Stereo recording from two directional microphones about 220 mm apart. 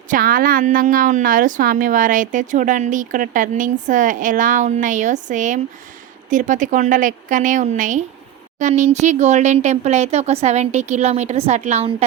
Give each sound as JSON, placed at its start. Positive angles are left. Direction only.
{"t": 0.1, "sound": "a woman's voice", "side_deg": -40}